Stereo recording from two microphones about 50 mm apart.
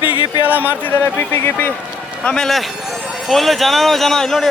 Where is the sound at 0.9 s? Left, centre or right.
Left.